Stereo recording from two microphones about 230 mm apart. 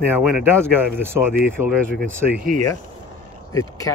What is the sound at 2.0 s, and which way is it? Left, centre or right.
Speech, right.